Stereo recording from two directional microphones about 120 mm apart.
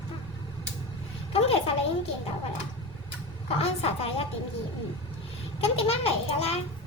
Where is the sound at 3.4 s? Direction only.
55° left (ahead or behind).